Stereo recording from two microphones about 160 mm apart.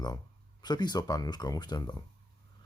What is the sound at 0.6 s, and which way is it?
Speech, 25° left (ahead or behind).